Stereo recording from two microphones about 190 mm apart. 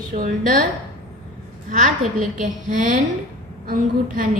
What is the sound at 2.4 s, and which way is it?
A woman's voice, 40° right (ahead or behind).